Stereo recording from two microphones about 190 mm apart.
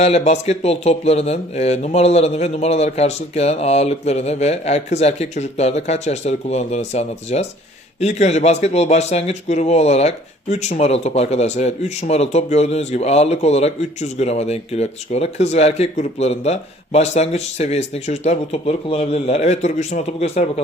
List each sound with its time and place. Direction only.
0.0 s a man's voice: 35° left (ahead or behind)